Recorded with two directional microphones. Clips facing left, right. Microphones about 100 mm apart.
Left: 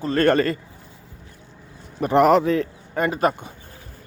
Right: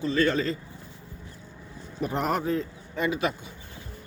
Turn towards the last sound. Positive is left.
turn(degrees=45)  # may be behind; listen again after turning